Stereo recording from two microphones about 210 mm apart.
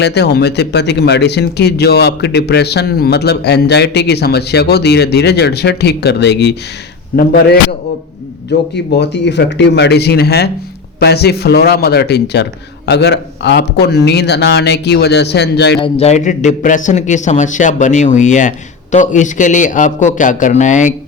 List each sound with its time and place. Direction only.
0.0 s speech: 55° left (ahead or behind)
8.4 s speech: 50° left (ahead or behind)
15.8 s a man's voice: 30° left (ahead or behind)